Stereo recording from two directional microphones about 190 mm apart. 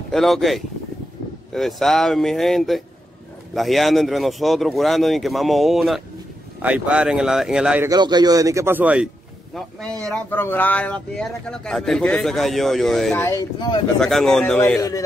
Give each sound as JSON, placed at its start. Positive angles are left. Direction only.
{"t": 0.1, "sound": "speech", "side_deg": 0}
{"t": 7.9, "sound": "speech", "side_deg": -20}
{"t": 13.1, "sound": "speech", "side_deg": 15}
{"t": 13.9, "sound": "speech", "side_deg": 5}
{"t": 14.8, "sound": "speech", "side_deg": 15}